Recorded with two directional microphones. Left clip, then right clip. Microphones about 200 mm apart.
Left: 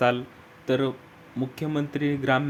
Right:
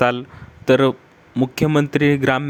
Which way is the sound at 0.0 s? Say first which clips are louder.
Right 5 dB; 35° right (ahead or behind).